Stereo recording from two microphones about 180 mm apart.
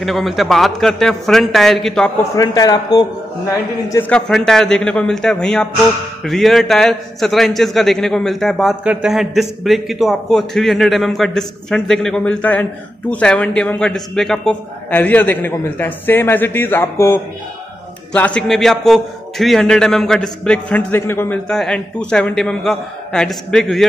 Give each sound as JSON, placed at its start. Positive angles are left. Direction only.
{"t": 0.0, "sound": "a man's voice", "side_deg": 0}
{"t": 2.3, "sound": "a man's voice", "side_deg": 20}
{"t": 4.1, "sound": "a man's voice", "side_deg": 5}